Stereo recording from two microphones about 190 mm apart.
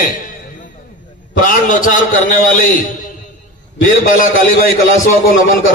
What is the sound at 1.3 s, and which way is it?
A man's voice, 45° left (ahead or behind).